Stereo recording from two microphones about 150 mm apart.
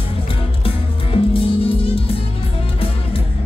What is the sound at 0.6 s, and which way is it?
Music, 40° left (ahead or behind).